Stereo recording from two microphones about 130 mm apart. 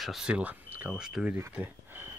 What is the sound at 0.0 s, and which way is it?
Speech, 5° right (ahead or behind).